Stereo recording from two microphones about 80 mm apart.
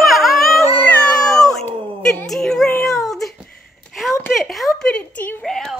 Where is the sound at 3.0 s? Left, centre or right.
Centre.